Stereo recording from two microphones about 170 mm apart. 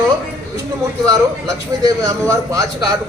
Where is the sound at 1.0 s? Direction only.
20° right (ahead or behind).